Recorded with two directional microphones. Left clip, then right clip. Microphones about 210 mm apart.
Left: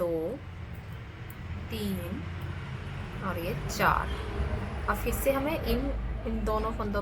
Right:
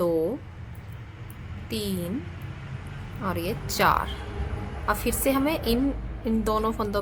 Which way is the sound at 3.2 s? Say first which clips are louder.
Right 5 dB; 55° right (ahead or behind).